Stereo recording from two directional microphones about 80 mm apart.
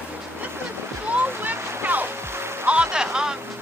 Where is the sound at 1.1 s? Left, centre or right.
Right.